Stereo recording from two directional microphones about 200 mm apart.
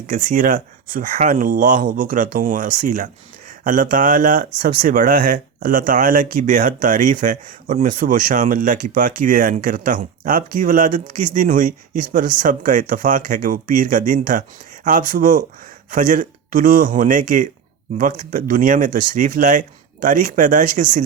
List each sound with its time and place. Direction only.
0.1 s speech: 40° right (ahead or behind)